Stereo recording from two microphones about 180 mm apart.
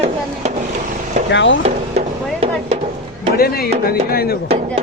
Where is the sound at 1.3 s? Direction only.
85° left.